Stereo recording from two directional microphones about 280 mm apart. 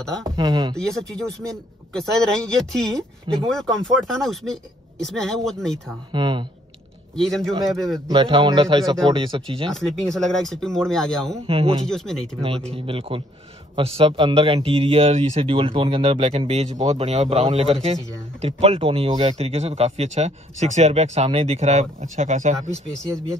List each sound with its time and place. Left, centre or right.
0.2 s speech: centre
0.7 s speech: centre
6.1 s speech: centre
7.2 s speech: centre
8.1 s speech: centre
9.7 s speech: centre
11.4 s speech: centre
11.9 s speech: centre
12.4 s speech: right